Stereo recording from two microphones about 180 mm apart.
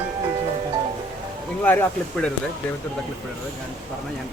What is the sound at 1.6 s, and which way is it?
Speech, 10° left (ahead or behind).